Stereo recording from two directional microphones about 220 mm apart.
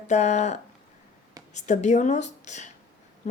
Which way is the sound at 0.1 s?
30° left (ahead or behind).